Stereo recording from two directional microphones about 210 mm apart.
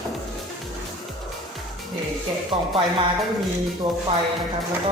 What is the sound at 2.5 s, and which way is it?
Speech, 25° right (ahead or behind).